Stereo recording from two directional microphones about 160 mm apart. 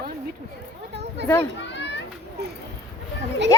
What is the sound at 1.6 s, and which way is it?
Children playing, 90° left.